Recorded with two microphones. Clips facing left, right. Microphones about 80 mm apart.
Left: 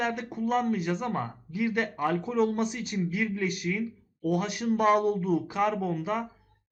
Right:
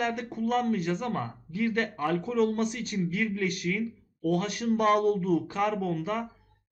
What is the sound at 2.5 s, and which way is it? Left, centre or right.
A man's voice, centre.